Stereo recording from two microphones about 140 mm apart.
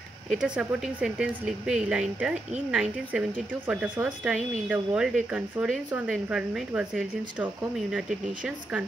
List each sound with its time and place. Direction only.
0.3 s speech: 5° right (ahead or behind)